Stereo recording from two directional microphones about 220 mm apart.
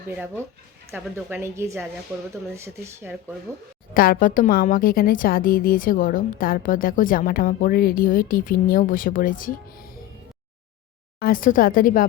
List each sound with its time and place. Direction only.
0.1 s a woman's voice: 10° right (ahead or behind)
3.9 s a woman's voice: 40° left (ahead or behind)
11.2 s a woman's voice: 40° left (ahead or behind)